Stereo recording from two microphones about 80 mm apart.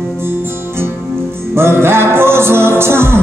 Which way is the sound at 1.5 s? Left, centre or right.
Right.